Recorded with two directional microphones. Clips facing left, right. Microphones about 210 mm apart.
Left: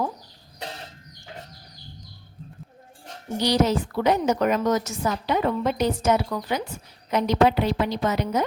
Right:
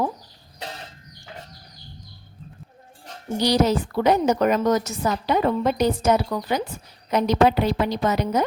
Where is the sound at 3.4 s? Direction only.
35° right (ahead or behind).